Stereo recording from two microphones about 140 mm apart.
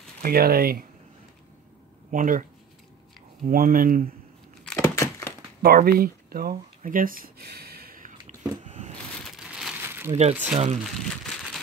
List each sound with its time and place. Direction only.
0.2 s speech: 90° right
2.0 s speech: 70° right (ahead or behind)
3.4 s speech: 90° right
4.7 s a sound: 20° left (ahead or behind)
5.6 s speech: 90° right
7.7 s a sound: 90° right
8.6 s a sound: 60° right (ahead or behind)
9.2 s crumpling: 5° right (ahead or behind)
10.4 s speech: 60° right (ahead or behind)
10.8 s crumpling: centre (ahead or behind)